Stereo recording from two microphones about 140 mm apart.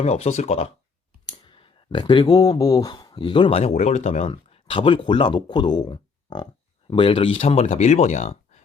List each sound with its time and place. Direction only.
0.0 s speech: 50° left (ahead or behind)
1.3 s speech: 35° left (ahead or behind); by 8.6 s 50° left (ahead or behind)